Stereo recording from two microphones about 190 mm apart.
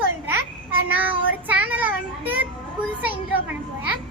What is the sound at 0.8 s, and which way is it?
A child's voice, 10° right (ahead or behind).